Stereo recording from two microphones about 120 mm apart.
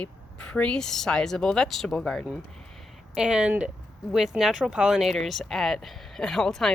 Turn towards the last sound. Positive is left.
turn(degrees=5)  # may be behind; listen again after turning